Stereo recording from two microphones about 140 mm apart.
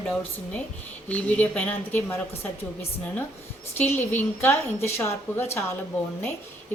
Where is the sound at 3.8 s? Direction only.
15° left (ahead or behind).